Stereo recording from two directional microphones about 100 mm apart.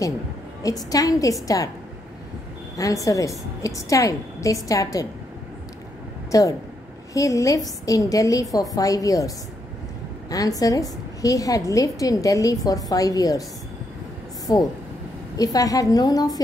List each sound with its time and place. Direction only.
0.6 s a woman's voice: 35° left (ahead or behind)
2.8 s a woman's voice: 35° left (ahead or behind)
6.3 s a woman's voice: 35° left (ahead or behind)
10.3 s a woman's voice: 35° left (ahead or behind)
14.4 s a sound: 40° left (ahead or behind)
15.3 s a woman's voice: 35° left (ahead or behind)